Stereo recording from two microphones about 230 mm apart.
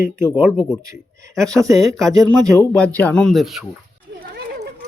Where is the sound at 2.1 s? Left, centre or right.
Centre.